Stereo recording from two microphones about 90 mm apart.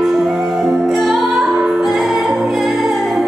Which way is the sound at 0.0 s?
5° right (ahead or behind).